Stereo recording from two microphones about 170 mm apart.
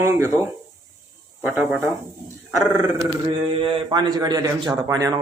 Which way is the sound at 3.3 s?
30° right (ahead or behind).